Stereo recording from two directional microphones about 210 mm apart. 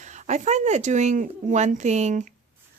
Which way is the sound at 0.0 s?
35° right (ahead or behind).